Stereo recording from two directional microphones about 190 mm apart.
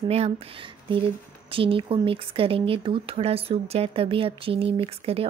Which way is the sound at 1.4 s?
30° right (ahead or behind).